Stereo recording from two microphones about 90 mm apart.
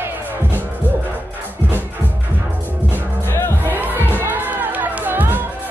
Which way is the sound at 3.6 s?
20° right (ahead or behind).